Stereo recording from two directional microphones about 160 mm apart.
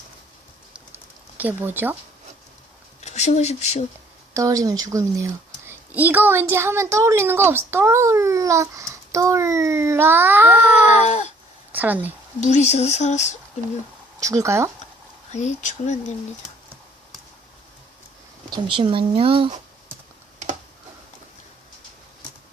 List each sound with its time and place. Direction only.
1.4 s a woman's voice: 10° right (ahead or behind)
3.0 s speech: 45° left (ahead or behind)
4.4 s a woman's voice: 20° right (ahead or behind)
11.0 s speech: 45° left (ahead or behind)
11.7 s a woman's voice: 10° right (ahead or behind)
12.4 s speech: 45° left (ahead or behind)
14.2 s speech: 20° right (ahead or behind)
15.3 s speech: 45° left (ahead or behind)
18.5 s speech: 30° right (ahead or behind)